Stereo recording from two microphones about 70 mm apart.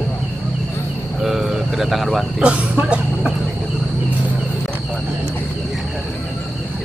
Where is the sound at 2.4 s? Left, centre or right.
Centre.